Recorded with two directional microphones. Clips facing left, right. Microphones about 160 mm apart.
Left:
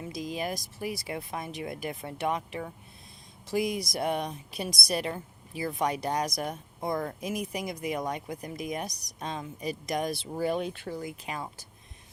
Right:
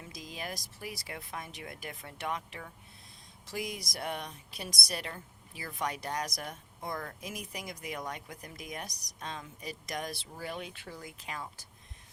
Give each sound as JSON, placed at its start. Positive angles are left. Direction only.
{"t": 0.1, "sound": "a woman's voice", "side_deg": 15}
{"t": 6.7, "sound": "speech", "side_deg": 25}
{"t": 10.3, "sound": "speech", "side_deg": 30}
{"t": 11.0, "sound": "a woman's voice", "side_deg": 15}